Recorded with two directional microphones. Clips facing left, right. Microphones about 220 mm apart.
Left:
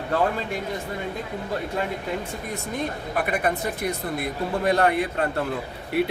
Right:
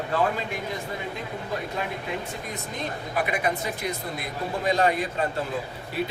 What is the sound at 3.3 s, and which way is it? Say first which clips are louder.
A man's voice: left 2 dB; 55° left (ahead or behind).